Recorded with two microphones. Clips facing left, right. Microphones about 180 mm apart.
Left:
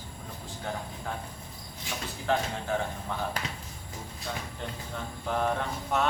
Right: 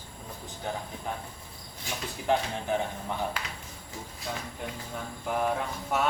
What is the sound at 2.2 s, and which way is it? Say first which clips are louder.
Speech: right 2 dB; 20° right (ahead or behind).